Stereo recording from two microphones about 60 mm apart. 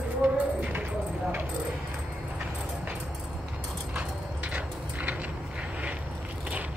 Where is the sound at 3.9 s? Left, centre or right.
Right.